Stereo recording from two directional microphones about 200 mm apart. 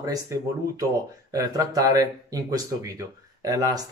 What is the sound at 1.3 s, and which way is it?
Speech, 20° right (ahead or behind).